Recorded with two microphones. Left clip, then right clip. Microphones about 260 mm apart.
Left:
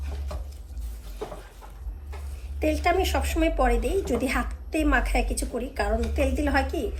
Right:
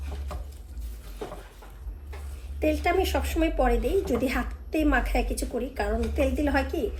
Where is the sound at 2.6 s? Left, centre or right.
Left.